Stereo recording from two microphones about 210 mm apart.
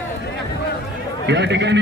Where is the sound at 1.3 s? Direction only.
55° right (ahead or behind).